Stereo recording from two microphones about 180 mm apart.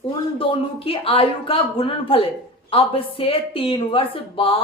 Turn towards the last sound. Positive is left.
turn(degrees=30)  # may be behind; listen again after turning